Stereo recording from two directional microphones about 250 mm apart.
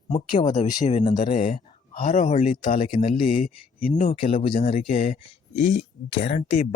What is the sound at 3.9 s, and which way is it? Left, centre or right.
Speech, left.